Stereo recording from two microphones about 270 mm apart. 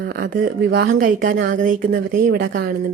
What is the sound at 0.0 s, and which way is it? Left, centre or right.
Speech, right.